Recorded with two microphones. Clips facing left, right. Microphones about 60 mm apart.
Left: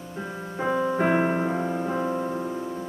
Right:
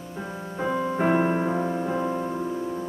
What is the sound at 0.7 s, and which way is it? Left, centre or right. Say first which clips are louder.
Music: left 3 dB; left.